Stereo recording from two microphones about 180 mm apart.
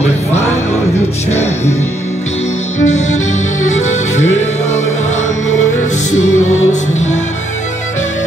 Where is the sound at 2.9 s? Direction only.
40° left (ahead or behind).